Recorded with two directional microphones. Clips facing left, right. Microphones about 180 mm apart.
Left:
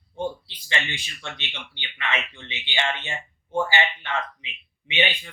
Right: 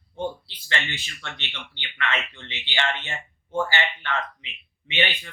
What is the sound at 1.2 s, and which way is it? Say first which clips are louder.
Speech: left 1 dB; 15° left (ahead or behind).